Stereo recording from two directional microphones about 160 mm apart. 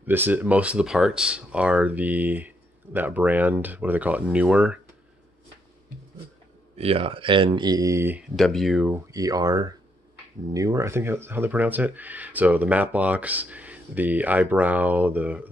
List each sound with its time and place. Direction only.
0.0 s speech: 10° right (ahead or behind)
6.8 s speech: 35° right (ahead or behind); by 8.2 s 20° right (ahead or behind)
8.2 s speech: centre (ahead or behind)
8.9 s speech: 20° right (ahead or behind)